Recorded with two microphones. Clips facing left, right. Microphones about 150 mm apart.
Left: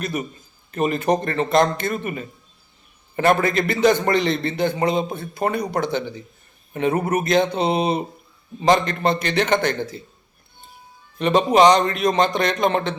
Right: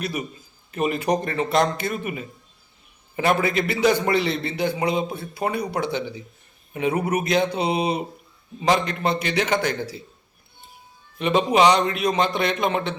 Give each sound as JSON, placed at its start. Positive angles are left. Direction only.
{"t": 0.0, "sound": "a man's voice", "side_deg": -10}
{"t": 11.2, "sound": "speech", "side_deg": -5}